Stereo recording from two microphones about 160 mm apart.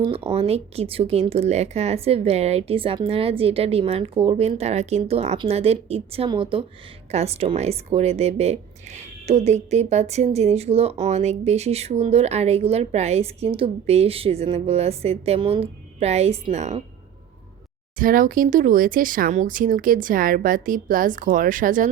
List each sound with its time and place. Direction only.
0.0 s speech: 35° right (ahead or behind)
18.0 s speech: 60° right (ahead or behind)